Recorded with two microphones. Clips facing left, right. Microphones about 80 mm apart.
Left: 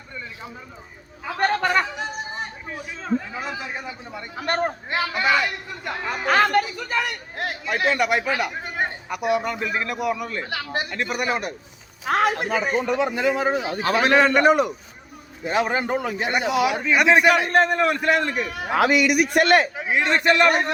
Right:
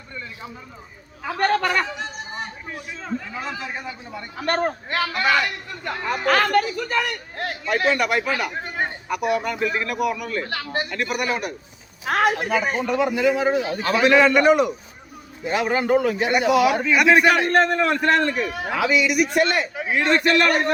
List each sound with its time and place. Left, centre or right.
1.5 s speech: left
2.6 s a man's voice: centre
9.0 s a man's voice: left
10.4 s a man's voice: centre
10.9 s a man's voice: left
13.6 s a man's voice: centre
13.8 s a man's voice: left; by 18.4 s centre
18.7 s a man's voice: left
19.7 s a man's voice: left